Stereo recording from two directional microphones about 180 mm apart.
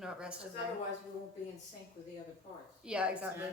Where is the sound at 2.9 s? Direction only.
5° right (ahead or behind).